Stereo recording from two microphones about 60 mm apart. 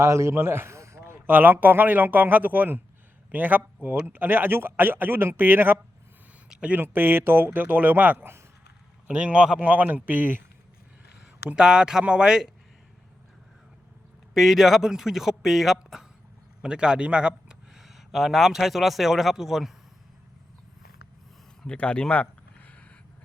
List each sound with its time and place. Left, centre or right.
0.0 s a man's voice: right
1.3 s speech: right
6.5 s speech: centre
6.7 s speech: right
9.0 s a man's voice: centre
11.4 s speech: centre
14.3 s speech: centre
16.6 s speech: centre
21.6 s a sound: centre